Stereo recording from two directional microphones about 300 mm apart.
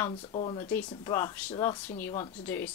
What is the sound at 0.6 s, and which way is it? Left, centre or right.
Speech, centre.